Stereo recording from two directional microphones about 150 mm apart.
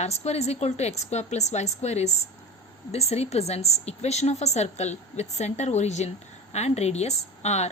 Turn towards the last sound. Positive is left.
turn(degrees=45)  # may be behind; listen again after turning